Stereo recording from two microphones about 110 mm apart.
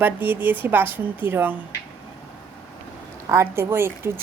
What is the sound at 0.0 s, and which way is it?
Speech, 15° right (ahead or behind).